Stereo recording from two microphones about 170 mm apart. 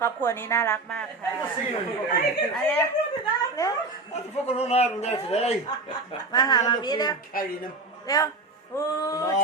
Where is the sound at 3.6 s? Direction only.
20° left (ahead or behind).